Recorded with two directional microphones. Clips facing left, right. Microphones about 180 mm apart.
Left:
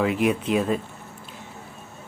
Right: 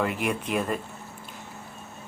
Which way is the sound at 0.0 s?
Centre (ahead or behind).